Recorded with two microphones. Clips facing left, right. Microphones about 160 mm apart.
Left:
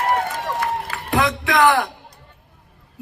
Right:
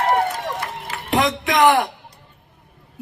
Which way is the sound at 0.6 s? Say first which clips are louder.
Left 5 dB; 20° right (ahead or behind).